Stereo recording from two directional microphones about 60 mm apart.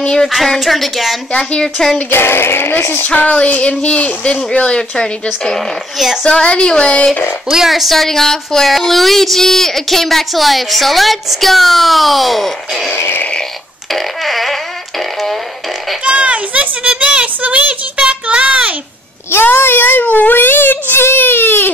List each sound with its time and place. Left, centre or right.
0.0 s speech: centre
0.3 s a woman's voice: centre
1.3 s speech: centre
2.0 s a child's voice: left
3.3 s child singing: left
3.8 s speech: left
7.5 s a woman's voice: centre
12.9 s fart: left
13.9 s fart: centre
16.0 s a sound: centre
19.3 s a child's voice: left